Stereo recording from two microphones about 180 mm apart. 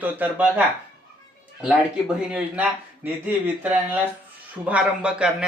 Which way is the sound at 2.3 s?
10° right (ahead or behind).